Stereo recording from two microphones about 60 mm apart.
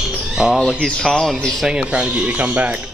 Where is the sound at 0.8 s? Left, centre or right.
Centre.